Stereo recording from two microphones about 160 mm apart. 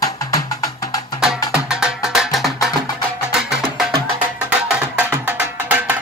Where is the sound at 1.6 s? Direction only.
5° right (ahead or behind).